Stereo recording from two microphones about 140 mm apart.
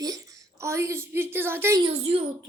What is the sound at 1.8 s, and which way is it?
Speech, 45° right (ahead or behind).